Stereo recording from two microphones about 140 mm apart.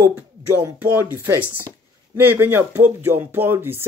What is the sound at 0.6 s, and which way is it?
Speech, 10° right (ahead or behind).